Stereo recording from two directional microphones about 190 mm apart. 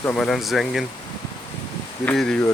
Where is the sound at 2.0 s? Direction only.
5° left (ahead or behind).